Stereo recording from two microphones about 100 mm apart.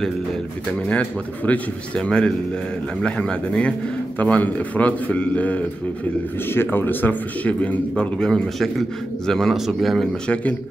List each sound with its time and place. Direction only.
0.8 s a man's voice: 15° left (ahead or behind)